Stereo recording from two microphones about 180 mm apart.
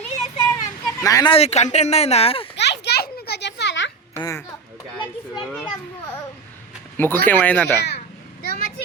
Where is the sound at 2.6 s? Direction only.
70° left (ahead or behind).